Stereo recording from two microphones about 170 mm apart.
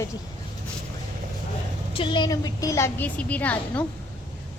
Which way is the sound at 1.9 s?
30° left (ahead or behind).